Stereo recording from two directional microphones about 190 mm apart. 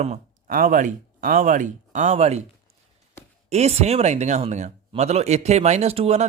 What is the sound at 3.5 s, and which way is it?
Speech, 35° right (ahead or behind).